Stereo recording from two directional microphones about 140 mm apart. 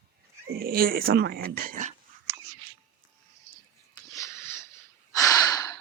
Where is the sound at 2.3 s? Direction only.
20° right (ahead or behind).